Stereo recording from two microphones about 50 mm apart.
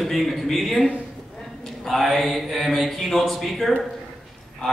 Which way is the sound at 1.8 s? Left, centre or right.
Centre.